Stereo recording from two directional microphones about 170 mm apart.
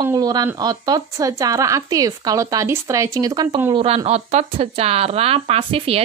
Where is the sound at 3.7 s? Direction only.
35° right (ahead or behind).